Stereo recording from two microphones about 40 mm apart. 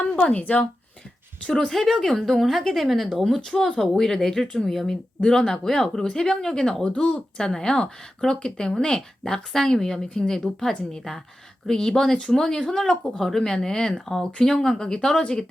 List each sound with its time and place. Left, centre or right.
0.3 s speech: left
1.5 s speech: centre
1.7 s speech: centre
6.8 s speech: left